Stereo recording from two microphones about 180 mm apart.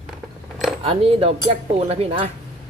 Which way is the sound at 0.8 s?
35° right (ahead or behind).